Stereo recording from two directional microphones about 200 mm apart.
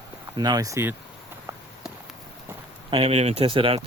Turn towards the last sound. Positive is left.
turn(degrees=-25)  # may be behind; listen again after turning